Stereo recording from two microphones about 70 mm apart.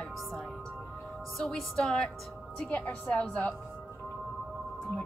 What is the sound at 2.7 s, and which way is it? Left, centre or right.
Speech, left.